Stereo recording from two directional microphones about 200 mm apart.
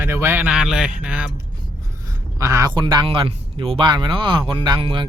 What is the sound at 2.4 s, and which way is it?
Speech, 15° right (ahead or behind).